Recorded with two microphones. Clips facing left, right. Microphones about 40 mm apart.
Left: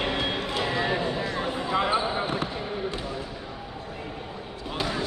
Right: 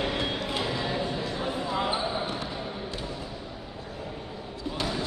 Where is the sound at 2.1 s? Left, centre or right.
Left.